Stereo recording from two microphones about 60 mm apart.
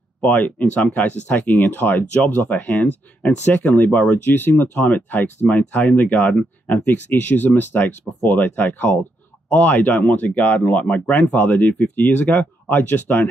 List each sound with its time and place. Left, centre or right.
0.2 s speech: left